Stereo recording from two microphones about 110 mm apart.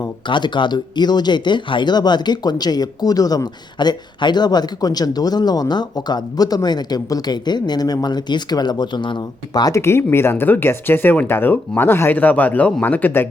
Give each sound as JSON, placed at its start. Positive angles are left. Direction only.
{"t": 0.3, "sound": "speech", "side_deg": 45}